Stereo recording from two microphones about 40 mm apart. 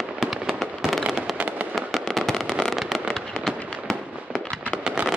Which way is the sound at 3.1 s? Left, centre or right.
Centre.